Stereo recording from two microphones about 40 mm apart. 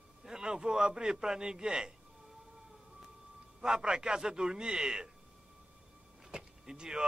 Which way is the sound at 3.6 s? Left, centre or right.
Centre.